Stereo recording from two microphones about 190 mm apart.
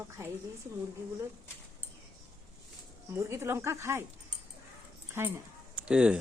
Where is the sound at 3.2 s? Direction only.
15° right (ahead or behind).